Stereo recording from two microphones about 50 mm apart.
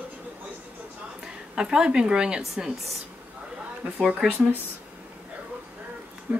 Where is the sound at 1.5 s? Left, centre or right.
Centre.